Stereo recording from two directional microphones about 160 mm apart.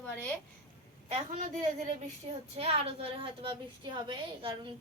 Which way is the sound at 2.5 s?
40° right (ahead or behind).